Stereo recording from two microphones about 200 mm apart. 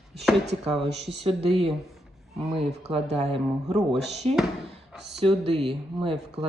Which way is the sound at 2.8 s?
35° right (ahead or behind).